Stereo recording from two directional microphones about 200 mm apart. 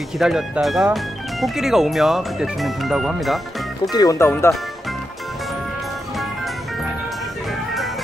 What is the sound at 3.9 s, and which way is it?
Speech, 20° left (ahead or behind).